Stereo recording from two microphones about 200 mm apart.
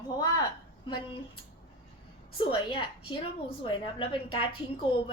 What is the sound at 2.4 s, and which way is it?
A woman's voice, 25° left (ahead or behind).